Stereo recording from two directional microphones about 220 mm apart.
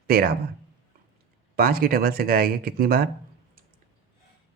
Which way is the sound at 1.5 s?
45° right (ahead or behind).